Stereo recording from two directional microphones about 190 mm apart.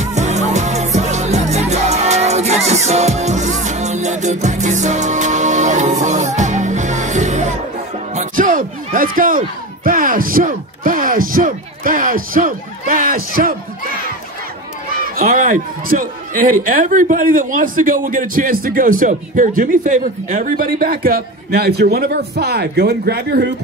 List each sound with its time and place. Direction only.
0.0 s music: 35° right (ahead or behind)
9.8 s speech: 45° right (ahead or behind)
15.1 s a man's voice: 45° right (ahead or behind)